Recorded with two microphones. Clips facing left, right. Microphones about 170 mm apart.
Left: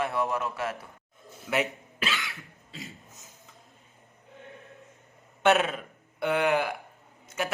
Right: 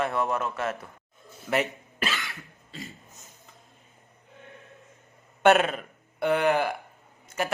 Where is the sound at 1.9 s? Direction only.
50° right (ahead or behind).